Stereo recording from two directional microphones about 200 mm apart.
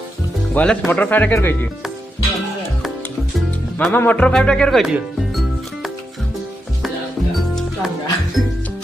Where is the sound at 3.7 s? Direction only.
10° left (ahead or behind).